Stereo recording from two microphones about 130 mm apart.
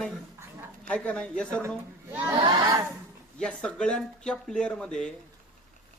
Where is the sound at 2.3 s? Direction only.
30° right (ahead or behind).